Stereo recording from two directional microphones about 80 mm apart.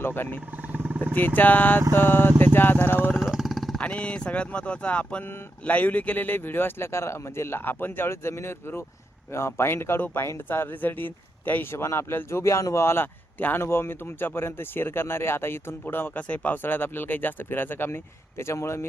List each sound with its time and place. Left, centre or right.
0.0 s speech: left
0.7 s vehicle: right
1.4 s speech: left
3.2 s vehicle: centre
3.8 s speech: centre; by 18.9 s left